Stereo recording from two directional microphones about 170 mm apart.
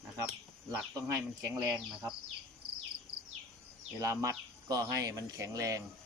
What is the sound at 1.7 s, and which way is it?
Speech, 5° right (ahead or behind).